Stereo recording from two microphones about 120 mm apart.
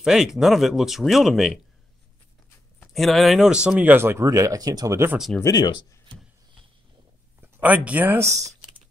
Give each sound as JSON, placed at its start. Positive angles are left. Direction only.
{"t": 0.0, "sound": "speech", "side_deg": -5}
{"t": 2.9, "sound": "speech", "side_deg": 0}
{"t": 5.4, "sound": "speech", "side_deg": 30}
{"t": 7.5, "sound": "speech", "side_deg": -15}